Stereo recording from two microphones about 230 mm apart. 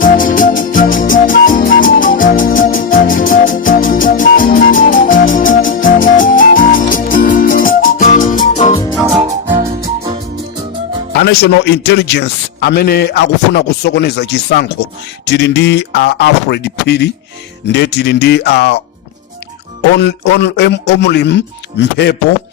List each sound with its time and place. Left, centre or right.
0.0 s music: left
8.9 s music: centre
11.1 s a man's voice: left
20.0 s a man's voice: left